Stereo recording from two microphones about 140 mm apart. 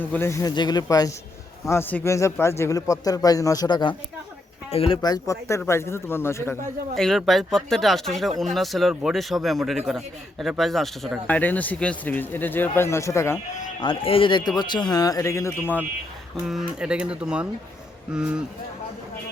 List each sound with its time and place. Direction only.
0.0 s a man's voice: 15° left (ahead or behind)
0.5 s a man's voice: 30° left (ahead or behind)
1.7 s a man's voice: 15° left (ahead or behind); by 3.9 s 30° left (ahead or behind)
4.7 s speech: 45° left (ahead or behind)
5.0 s a man's voice: 25° left (ahead or behind)
6.9 s a man's voice: 5° left (ahead or behind); by 13.4 s 20° left (ahead or behind)
13.8 s speech: 40° left (ahead or behind); by 15.5 s 20° left (ahead or behind)
16.5 s speech: 5° right (ahead or behind)